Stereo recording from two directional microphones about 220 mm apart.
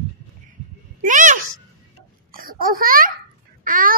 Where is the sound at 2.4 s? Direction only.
40° right (ahead or behind).